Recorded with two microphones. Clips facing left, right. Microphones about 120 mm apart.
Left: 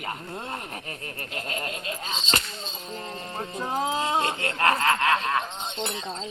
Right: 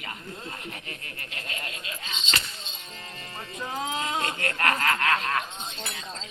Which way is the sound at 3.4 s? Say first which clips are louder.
Left 5 dB; 45° left (ahead or behind).